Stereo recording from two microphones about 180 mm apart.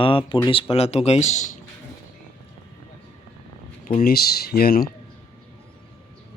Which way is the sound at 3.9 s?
55° left (ahead or behind).